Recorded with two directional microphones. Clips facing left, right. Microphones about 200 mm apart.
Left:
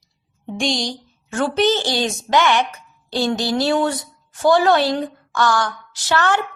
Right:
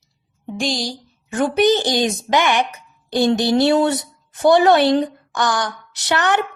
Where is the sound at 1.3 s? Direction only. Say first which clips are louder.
Right 2 dB; 15° right (ahead or behind).